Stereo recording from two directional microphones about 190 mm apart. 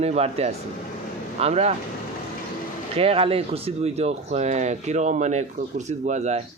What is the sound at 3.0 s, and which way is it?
Speech, 30° right (ahead or behind).